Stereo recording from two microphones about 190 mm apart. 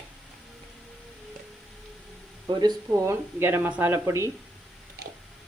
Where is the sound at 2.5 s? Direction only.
20° right (ahead or behind).